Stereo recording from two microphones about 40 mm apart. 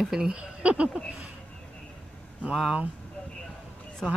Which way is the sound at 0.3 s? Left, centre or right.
Right.